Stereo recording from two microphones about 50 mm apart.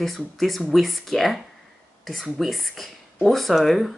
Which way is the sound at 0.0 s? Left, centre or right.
Centre.